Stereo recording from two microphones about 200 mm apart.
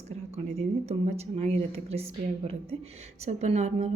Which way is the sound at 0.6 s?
30° right (ahead or behind).